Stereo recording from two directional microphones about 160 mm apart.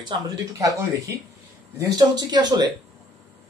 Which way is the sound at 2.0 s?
25° right (ahead or behind).